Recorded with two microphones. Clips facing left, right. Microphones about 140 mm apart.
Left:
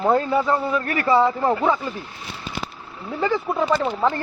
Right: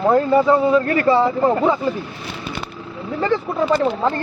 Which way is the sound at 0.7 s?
30° right (ahead or behind).